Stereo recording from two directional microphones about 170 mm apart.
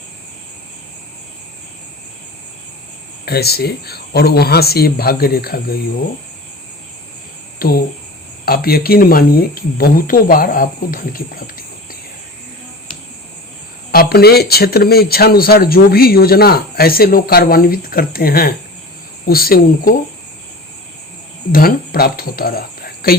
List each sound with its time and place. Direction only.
3.2 s speech: 70° left (ahead or behind)
7.6 s speech: 60° left (ahead or behind)
13.9 s speech: 65° left (ahead or behind)
21.5 s speech: 60° left (ahead or behind)